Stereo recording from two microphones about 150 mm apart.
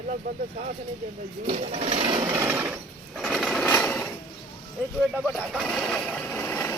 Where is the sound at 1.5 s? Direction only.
60° right (ahead or behind).